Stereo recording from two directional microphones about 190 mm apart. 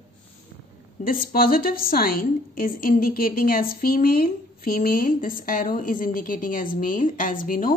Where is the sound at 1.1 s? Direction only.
50° left (ahead or behind).